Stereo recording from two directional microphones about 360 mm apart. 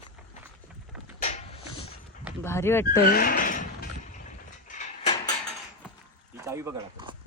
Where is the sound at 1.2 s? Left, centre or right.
Centre.